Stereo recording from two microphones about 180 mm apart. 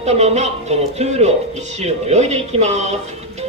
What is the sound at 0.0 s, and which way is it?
Music, 40° right (ahead or behind).